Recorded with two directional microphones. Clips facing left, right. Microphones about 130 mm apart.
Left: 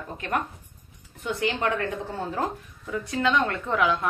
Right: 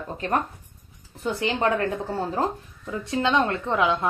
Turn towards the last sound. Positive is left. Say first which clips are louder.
# right 1 dB
turn(degrees=-25)  # may be behind; listen again after turning